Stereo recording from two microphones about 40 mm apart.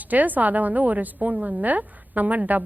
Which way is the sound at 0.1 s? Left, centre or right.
Right.